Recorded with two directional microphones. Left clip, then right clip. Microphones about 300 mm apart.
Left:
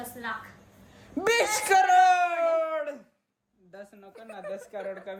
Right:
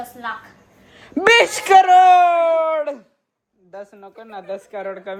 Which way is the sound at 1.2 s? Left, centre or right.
Right.